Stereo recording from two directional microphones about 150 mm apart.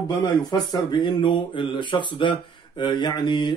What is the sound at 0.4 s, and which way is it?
Speech, 30° left (ahead or behind).